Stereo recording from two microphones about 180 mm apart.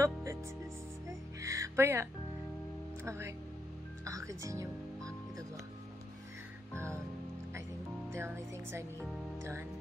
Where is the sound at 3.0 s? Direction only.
15° right (ahead or behind).